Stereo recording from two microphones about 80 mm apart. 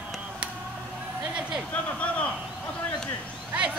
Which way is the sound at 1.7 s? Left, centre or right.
Centre.